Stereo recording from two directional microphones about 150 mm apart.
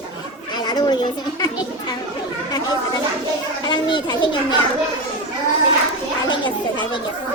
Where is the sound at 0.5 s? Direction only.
30° left (ahead or behind).